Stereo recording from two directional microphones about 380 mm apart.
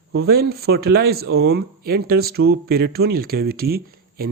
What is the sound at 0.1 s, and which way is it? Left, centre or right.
Speech, right.